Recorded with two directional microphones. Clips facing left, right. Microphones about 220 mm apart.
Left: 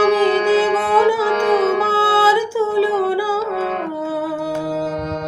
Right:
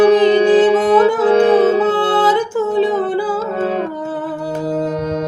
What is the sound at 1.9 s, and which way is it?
Music, 10° left (ahead or behind).